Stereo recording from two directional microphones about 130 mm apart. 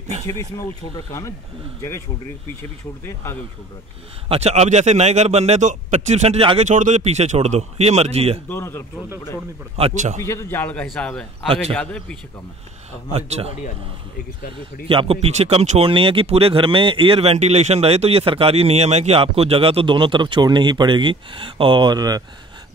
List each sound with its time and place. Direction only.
0.3 s speech: 25° left (ahead or behind)
4.3 s a man's voice: 55° right (ahead or behind)
6.6 s a man's voice: 70° right (ahead or behind); by 8.4 s 55° right (ahead or behind)
8.5 s speech: 20° left (ahead or behind)
9.9 s a man's voice: 65° right (ahead or behind)
10.2 s a man's voice: 20° left (ahead or behind)
11.4 s speech: 45° right (ahead or behind)
11.7 s a man's voice: 5° left (ahead or behind)
13.1 s speech: 50° right (ahead or behind)
14.9 s speech: 45° right (ahead or behind)
15.8 s speech: 45° right (ahead or behind)